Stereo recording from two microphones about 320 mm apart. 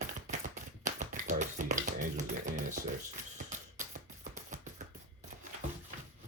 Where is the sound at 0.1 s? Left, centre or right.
Right.